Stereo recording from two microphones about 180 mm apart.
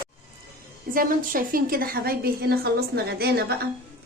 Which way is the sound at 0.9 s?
50° right (ahead or behind).